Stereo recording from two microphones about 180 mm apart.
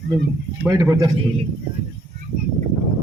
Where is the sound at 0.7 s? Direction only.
15° right (ahead or behind).